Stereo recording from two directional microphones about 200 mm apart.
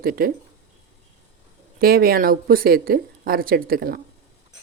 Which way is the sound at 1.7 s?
50° right (ahead or behind).